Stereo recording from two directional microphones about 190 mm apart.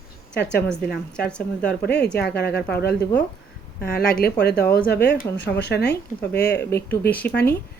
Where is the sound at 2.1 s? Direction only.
60° left (ahead or behind).